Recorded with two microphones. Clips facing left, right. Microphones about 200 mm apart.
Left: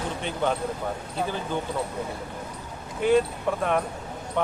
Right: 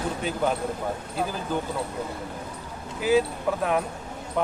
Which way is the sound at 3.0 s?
5° right (ahead or behind).